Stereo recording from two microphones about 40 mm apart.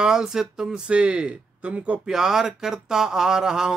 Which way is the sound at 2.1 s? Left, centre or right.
Centre.